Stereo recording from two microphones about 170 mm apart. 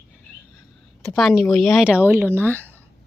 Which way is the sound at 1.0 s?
Centre (ahead or behind).